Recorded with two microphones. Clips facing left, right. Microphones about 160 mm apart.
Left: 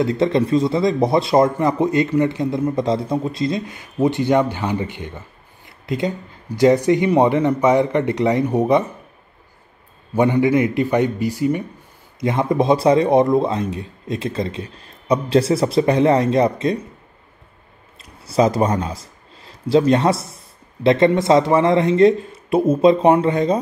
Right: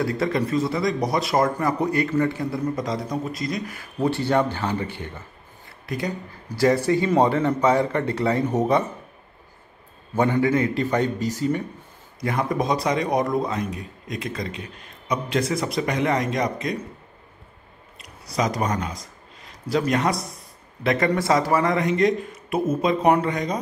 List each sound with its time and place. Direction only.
0.0 s speech: 25° left (ahead or behind)
10.1 s speech: 15° left (ahead or behind)
18.0 s speech: 30° left (ahead or behind)